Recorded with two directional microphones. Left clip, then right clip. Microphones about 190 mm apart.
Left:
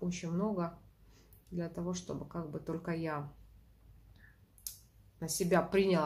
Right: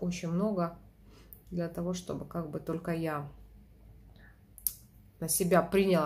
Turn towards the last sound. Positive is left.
turn(degrees=-5)  # may be behind; listen again after turning